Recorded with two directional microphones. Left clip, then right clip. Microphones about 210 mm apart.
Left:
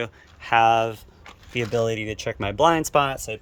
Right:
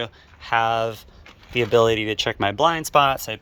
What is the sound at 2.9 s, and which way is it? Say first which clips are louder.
Speech: right 4 dB; 5° left (ahead or behind).